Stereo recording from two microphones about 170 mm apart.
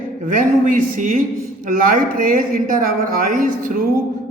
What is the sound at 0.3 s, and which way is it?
A man's voice, 50° right (ahead or behind).